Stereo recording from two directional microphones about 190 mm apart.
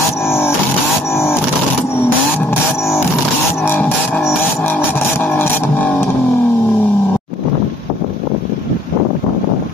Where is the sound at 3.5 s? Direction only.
10° left (ahead or behind).